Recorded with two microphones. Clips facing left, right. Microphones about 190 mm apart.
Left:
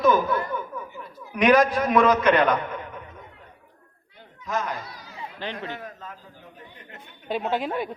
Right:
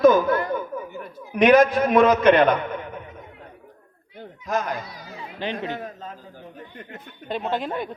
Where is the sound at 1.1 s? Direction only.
25° right (ahead or behind).